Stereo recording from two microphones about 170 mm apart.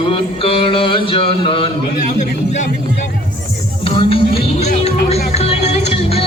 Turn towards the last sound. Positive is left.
turn(degrees=35)  # may be behind; listen again after turning